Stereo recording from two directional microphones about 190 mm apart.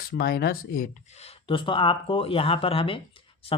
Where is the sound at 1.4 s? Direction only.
25° left (ahead or behind).